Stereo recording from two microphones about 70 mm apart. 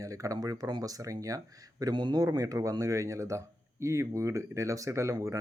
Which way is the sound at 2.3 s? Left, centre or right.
Right.